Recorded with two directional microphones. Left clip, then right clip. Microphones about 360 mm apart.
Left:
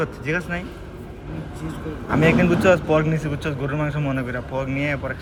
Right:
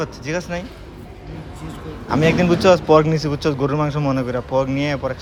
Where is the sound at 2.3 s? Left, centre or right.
Centre.